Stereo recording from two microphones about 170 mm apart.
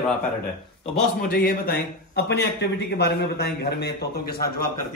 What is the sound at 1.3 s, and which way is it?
A man's voice, 65° left (ahead or behind).